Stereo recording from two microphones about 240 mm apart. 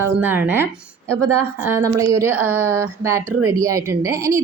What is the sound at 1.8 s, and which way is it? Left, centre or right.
A woman's voice, centre.